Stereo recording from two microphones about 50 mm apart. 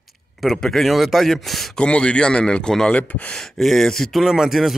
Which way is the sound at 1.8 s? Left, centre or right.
Left.